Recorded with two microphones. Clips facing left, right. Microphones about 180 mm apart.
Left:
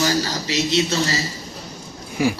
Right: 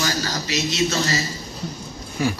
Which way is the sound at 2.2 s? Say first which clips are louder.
Left 3 dB; 10° left (ahead or behind).